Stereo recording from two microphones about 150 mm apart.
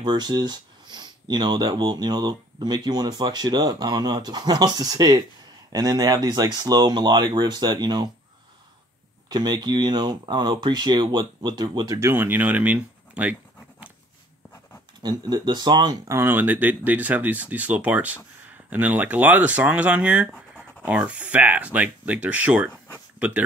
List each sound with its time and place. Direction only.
0.0 s speech: 30° right (ahead or behind)
9.3 s speech: 30° right (ahead or behind); by 13.9 s 10° right (ahead or behind)
15.0 s speech: 30° right (ahead or behind); by 23.4 s 10° right (ahead or behind)